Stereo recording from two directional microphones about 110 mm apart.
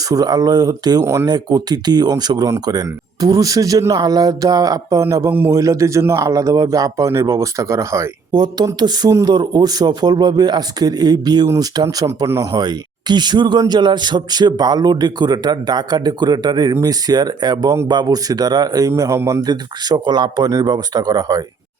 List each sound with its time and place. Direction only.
0.1 s speech: 35° right (ahead or behind)
1.3 s speech: 35° right (ahead or behind)
8.3 s speech: 40° right (ahead or behind)
19.4 s speech: 40° right (ahead or behind)